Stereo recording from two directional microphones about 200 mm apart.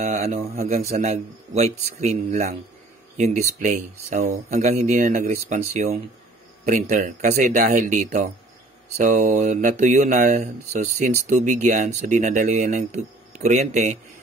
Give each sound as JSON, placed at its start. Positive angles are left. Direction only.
{"t": 0.0, "sound": "speech", "side_deg": -35}